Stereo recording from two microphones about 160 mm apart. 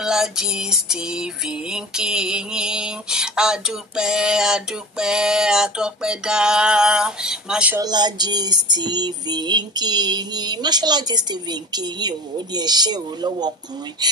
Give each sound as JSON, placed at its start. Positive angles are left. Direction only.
{"t": 0.0, "sound": "music", "side_deg": -5}
{"t": 7.8, "sound": "female singing", "side_deg": -25}